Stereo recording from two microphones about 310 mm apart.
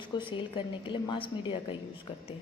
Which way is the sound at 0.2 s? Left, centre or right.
Centre.